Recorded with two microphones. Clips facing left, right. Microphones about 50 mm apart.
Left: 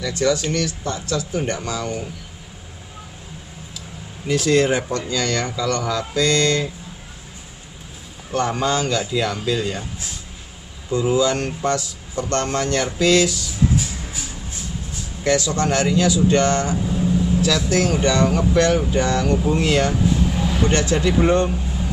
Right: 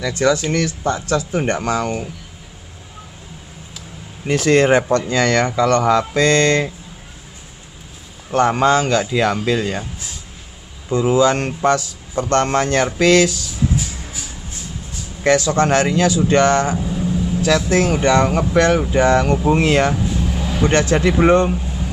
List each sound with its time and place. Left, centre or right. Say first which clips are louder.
0.0 s speech: right 3 dB; right
4.3 s speech: right 4 dB; right
8.3 s speech: right 6 dB; right
10.9 s speech: right 4 dB; right
15.2 s speech: right 5 dB; right
16.7 s vehicle: even; centre
17.4 s speech: right 7 dB; right
20.0 s vehicle: left 2 dB; centre
20.7 s speech: right 5 dB; right